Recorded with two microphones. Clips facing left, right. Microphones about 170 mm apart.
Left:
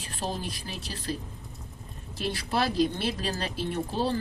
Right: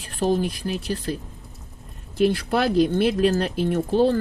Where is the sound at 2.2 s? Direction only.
55° right (ahead or behind).